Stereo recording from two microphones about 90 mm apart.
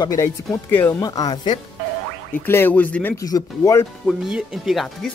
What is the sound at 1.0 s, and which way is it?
Speech, 50° left (ahead or behind).